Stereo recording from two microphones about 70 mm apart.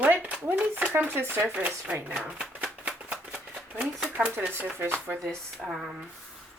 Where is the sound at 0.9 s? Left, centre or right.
Right.